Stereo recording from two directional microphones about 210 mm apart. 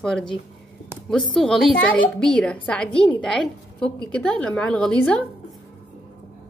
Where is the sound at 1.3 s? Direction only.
5° left (ahead or behind).